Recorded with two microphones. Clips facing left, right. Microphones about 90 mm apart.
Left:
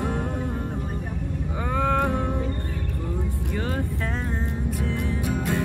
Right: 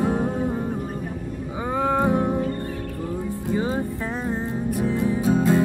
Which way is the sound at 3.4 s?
20° right (ahead or behind).